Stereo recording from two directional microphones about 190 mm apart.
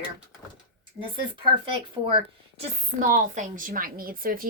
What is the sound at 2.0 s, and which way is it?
Speech, 20° right (ahead or behind).